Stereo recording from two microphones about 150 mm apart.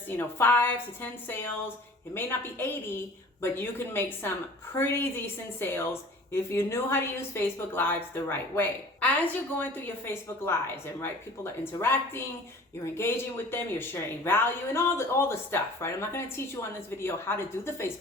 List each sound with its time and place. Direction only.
0.2 s a woman's voice: 15° left (ahead or behind)